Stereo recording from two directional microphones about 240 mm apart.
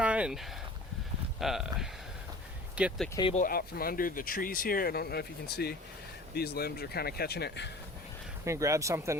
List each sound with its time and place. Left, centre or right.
0.0 s a sound: centre
1.4 s speech: centre
3.2 s speech: left
3.4 s speech: left
8.4 s speech: centre